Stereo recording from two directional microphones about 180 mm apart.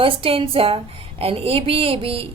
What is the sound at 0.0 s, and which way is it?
A woman's voice, 30° right (ahead or behind).